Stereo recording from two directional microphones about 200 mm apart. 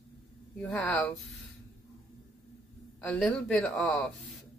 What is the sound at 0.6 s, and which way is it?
Speech, 5° left (ahead or behind).